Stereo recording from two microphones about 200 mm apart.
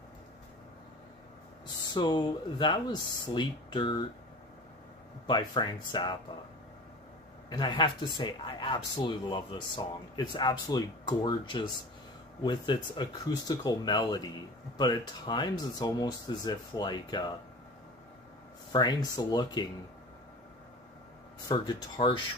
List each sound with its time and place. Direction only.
1.9 s speech: 20° left (ahead or behind)
5.2 s speech: 20° left (ahead or behind)
7.4 s speech: 20° left (ahead or behind)
18.7 s speech: 20° left (ahead or behind)
21.5 s speech: 20° left (ahead or behind)